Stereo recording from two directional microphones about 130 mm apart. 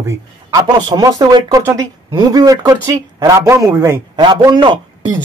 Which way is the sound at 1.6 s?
25° right (ahead or behind).